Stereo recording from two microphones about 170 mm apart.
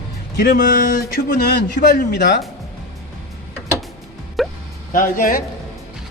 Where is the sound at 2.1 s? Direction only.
90° left.